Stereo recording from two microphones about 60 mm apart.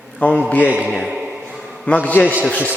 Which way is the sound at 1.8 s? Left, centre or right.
Left.